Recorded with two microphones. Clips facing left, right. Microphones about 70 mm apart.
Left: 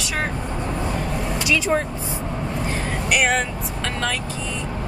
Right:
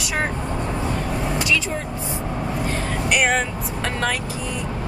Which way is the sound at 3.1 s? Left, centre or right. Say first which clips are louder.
Even; centre.